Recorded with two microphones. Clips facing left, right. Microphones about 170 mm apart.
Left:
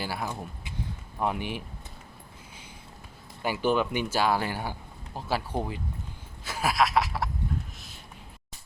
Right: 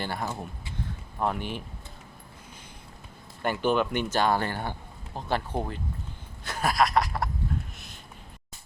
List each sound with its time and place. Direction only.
0.0 s speech: 5° left (ahead or behind)
3.4 s speech: 10° left (ahead or behind)
6.4 s a sound: 5° left (ahead or behind)